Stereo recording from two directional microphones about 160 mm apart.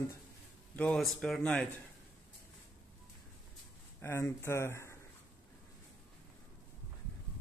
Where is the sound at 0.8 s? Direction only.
5° left (ahead or behind).